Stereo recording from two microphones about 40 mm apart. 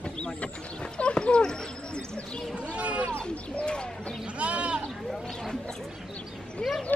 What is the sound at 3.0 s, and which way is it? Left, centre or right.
Speech, left.